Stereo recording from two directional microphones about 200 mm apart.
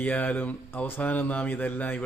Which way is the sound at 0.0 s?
10° left (ahead or behind).